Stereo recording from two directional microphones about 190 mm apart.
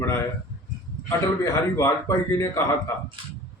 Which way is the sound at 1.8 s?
15° left (ahead or behind).